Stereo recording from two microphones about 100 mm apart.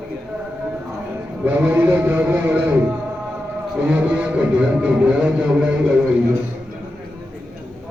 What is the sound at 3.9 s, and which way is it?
Speech, 15° right (ahead or behind).